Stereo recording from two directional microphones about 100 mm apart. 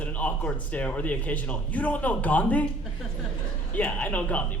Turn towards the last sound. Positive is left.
turn(degrees=15)  # may be behind; listen again after turning